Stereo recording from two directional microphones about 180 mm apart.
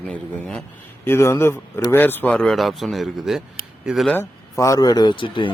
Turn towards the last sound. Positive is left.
turn(degrees=25)  # may be behind; listen again after turning